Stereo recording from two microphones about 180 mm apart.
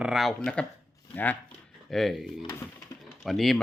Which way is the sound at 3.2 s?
Centre (ahead or behind).